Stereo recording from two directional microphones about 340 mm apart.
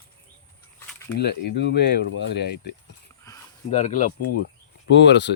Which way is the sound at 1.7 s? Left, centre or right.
Left.